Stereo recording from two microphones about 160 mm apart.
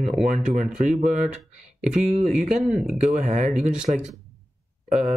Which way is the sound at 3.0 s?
50° right (ahead or behind).